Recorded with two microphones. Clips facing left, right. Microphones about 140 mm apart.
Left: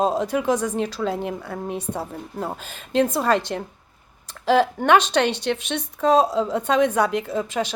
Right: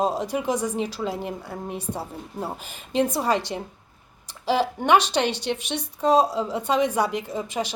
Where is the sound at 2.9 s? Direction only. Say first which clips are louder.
Left 3 dB; 15° right (ahead or behind).